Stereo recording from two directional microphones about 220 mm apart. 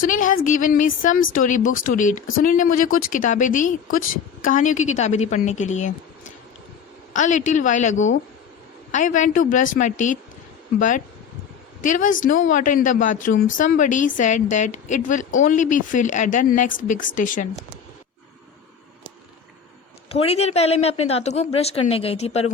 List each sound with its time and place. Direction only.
0.0 s speech: 35° left (ahead or behind)
20.1 s a woman's voice: 25° left (ahead or behind)